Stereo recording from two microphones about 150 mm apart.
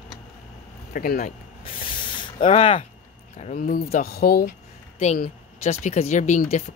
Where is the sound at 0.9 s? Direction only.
70° left (ahead or behind).